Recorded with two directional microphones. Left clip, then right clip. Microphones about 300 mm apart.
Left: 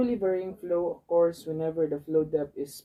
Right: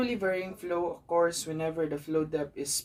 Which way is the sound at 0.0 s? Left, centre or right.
Right.